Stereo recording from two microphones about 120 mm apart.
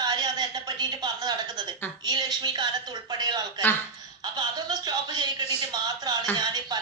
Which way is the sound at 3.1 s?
35° right (ahead or behind).